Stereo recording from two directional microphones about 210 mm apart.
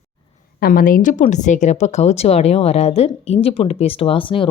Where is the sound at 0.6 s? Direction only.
45° left (ahead or behind).